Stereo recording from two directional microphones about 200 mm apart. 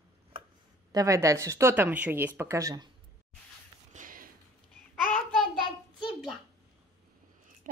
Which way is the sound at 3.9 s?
45° right (ahead or behind).